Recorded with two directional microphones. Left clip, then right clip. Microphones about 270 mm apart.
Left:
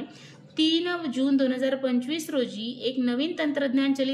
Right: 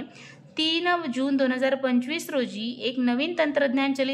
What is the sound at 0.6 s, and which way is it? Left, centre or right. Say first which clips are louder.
A woman's voice: right 1 dB; centre.